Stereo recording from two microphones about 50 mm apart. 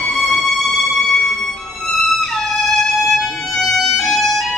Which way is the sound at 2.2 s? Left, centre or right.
Centre.